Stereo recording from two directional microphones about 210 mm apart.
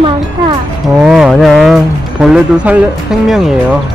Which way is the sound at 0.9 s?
5° right (ahead or behind).